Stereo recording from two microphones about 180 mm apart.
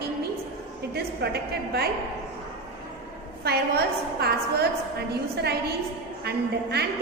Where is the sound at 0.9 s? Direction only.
65° right (ahead or behind).